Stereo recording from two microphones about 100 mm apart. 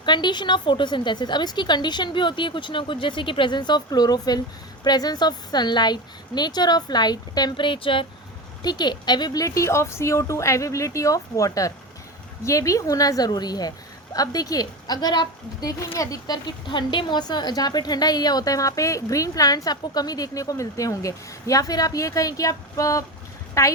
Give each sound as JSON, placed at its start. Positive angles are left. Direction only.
{"t": 0.0, "sound": "a woman's voice", "side_deg": 50}
{"t": 8.6, "sound": "a woman's voice", "side_deg": 45}